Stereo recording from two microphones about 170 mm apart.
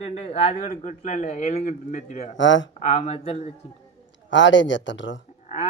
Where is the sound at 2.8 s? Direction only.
40° left (ahead or behind).